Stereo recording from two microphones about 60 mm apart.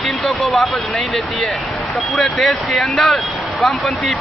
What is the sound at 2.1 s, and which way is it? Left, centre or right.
Speech, centre.